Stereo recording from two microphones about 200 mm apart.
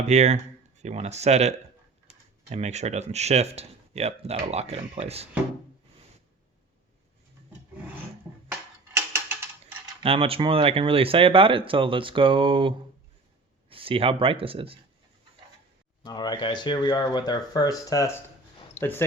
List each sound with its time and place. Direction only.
0.1 s speech: 35° right (ahead or behind)
9.0 s tick-tock: 10° right (ahead or behind)
10.0 s speech: 30° right (ahead or behind)
16.0 s speech: 20° left (ahead or behind)